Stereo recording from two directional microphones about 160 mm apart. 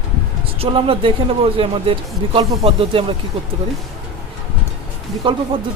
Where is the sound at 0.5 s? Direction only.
35° right (ahead or behind).